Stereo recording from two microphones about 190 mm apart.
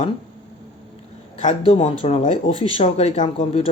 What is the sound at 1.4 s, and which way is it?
Speech, 35° left (ahead or behind).